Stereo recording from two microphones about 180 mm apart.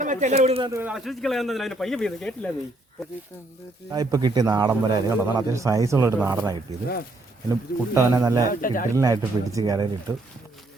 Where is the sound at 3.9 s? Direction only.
20° right (ahead or behind).